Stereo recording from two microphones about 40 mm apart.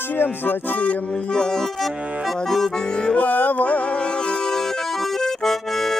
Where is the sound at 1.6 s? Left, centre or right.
Centre.